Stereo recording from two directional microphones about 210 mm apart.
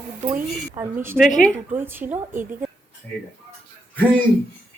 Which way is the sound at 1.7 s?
10° right (ahead or behind).